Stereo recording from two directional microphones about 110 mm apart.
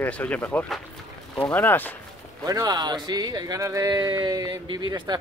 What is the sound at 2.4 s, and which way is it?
Speech, 35° right (ahead or behind).